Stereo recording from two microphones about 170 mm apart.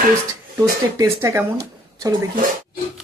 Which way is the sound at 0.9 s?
15° right (ahead or behind).